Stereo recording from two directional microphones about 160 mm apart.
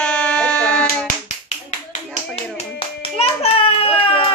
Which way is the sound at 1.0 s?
45° left (ahead or behind).